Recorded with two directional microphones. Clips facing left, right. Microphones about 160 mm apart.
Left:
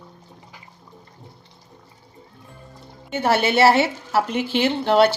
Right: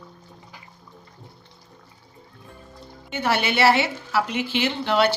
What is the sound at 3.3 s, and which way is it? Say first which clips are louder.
Speech: left 4 dB; 45° left (ahead or behind).